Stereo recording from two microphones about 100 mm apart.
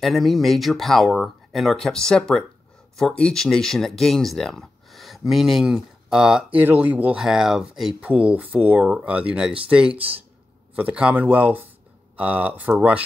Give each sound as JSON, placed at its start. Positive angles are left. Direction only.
{"t": 0.0, "sound": "speech", "side_deg": 0}
{"t": 7.2, "sound": "speech", "side_deg": -5}